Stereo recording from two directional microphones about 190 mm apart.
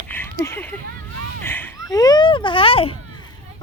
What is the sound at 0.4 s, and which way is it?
Speech, 10° left (ahead or behind).